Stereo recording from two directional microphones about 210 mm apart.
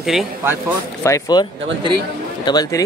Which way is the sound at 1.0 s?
15° left (ahead or behind).